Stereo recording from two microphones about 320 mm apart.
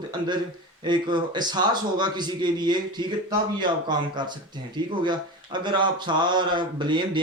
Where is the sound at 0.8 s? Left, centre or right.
Centre.